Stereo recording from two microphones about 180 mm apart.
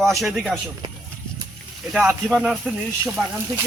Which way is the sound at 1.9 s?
5° right (ahead or behind).